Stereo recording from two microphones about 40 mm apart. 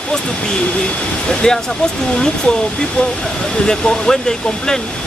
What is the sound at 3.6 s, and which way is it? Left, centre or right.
Speech, centre.